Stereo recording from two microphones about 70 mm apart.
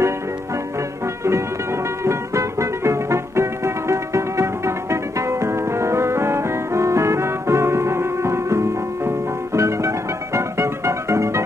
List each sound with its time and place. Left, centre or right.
2.0 s music: right